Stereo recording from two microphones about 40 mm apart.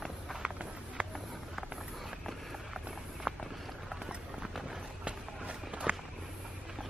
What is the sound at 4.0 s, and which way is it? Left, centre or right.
Run, centre.